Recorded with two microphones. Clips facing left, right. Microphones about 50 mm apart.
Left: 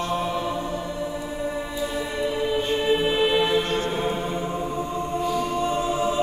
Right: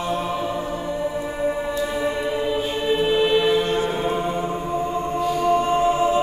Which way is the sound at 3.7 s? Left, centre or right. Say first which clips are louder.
Right 3 dB; centre.